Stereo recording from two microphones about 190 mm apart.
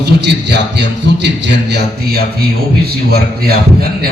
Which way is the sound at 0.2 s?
65° right (ahead or behind).